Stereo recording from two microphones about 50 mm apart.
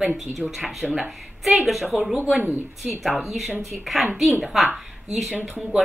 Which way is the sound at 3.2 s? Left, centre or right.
Centre.